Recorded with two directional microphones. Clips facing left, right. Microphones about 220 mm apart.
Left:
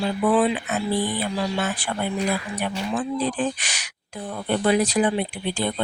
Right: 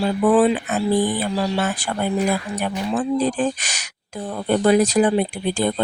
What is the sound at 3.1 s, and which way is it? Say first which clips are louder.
A woman's voice: right 4 dB; 45° right (ahead or behind).